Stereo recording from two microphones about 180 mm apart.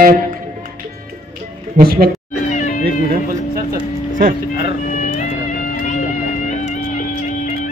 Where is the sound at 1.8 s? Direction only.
55° right (ahead or behind).